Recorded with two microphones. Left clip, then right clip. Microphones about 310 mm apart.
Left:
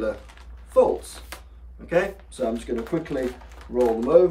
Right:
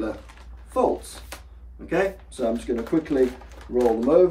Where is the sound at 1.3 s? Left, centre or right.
Centre.